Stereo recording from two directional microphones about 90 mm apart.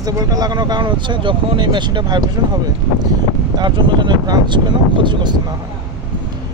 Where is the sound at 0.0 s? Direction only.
45° right (ahead or behind).